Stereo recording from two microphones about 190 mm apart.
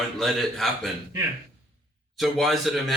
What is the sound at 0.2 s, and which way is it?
Speech, centre (ahead or behind).